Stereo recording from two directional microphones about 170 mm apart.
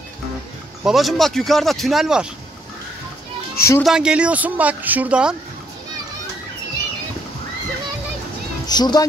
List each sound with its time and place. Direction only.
0.8 s speech: centre (ahead or behind)
3.5 s speech: 15° left (ahead or behind)
3.8 s speech: 5° right (ahead or behind)
8.6 s speech: 25° left (ahead or behind)